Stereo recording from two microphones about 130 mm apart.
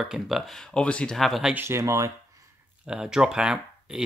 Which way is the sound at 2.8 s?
5° right (ahead or behind).